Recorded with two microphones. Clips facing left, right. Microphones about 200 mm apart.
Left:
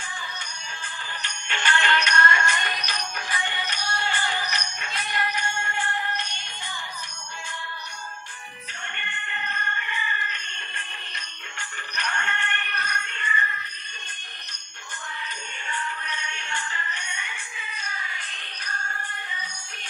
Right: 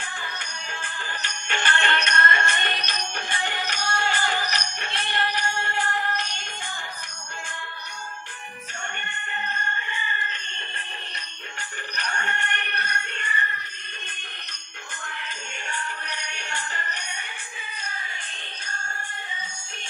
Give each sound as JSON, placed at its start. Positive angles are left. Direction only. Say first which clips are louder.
{"t": 0.0, "sound": "music", "louder": "right 2 dB", "side_deg": -60}
{"t": 2.6, "sound": "music", "louder": "right 1 dB", "side_deg": -25}
{"t": 9.8, "sound": "a sound", "louder": "even", "side_deg": -30}
{"t": 12.0, "sound": "music", "louder": "even", "side_deg": -40}
{"t": 16.2, "sound": "music", "louder": "even", "side_deg": -40}